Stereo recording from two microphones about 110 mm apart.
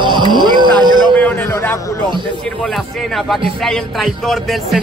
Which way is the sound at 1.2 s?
20° left (ahead or behind).